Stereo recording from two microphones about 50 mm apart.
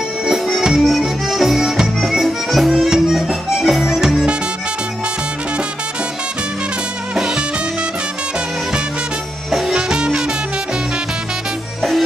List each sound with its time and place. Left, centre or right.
0.3 s music: centre
7.2 s music: centre
9.5 s music: centre
9.8 s music: centre